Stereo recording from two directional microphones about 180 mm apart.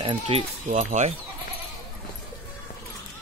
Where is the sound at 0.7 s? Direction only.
40° right (ahead or behind).